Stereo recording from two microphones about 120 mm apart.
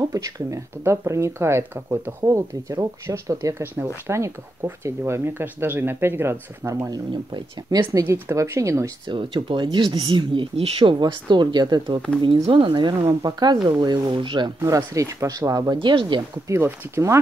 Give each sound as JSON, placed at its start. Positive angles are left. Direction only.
{"t": 0.1, "sound": "speech", "side_deg": -30}
{"t": 6.9, "sound": "speech", "side_deg": -35}
{"t": 9.0, "sound": "speech", "side_deg": -45}
{"t": 14.6, "sound": "speech", "side_deg": -25}
{"t": 16.4, "sound": "speech", "side_deg": -20}